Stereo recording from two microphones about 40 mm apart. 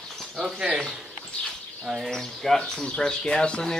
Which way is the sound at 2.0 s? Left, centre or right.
Centre.